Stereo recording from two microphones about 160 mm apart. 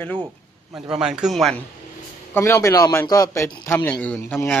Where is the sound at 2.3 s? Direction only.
20° left (ahead or behind).